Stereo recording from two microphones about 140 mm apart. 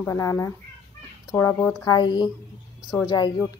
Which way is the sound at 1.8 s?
30° left (ahead or behind).